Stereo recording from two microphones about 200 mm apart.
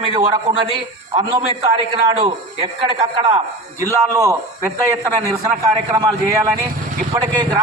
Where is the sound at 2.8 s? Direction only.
25° right (ahead or behind).